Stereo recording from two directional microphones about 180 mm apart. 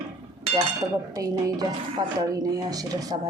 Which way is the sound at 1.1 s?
20° right (ahead or behind).